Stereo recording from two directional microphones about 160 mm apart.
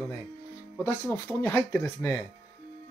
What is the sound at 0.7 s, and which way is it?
Speech, 15° left (ahead or behind).